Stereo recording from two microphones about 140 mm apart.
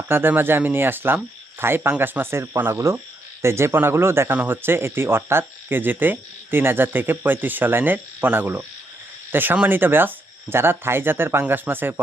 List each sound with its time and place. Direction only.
0.1 s speech: 15° right (ahead or behind)